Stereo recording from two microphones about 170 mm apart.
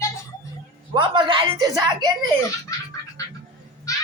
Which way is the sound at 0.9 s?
30° right (ahead or behind).